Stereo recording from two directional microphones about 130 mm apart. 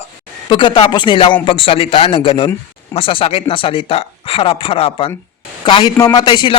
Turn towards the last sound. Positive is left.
turn(degrees=35)  # may be behind; listen again after turning